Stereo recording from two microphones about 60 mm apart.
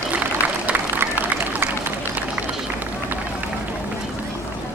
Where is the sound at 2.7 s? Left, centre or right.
Right.